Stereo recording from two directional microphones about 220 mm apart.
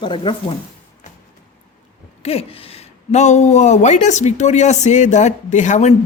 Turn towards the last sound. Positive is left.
turn(degrees=30)  # may be behind; listen again after turning